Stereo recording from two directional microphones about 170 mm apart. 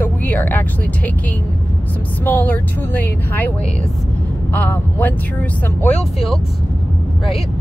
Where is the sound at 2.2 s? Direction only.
10° left (ahead or behind).